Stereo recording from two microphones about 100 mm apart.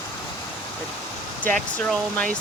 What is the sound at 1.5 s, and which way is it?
Speech, 5° left (ahead or behind).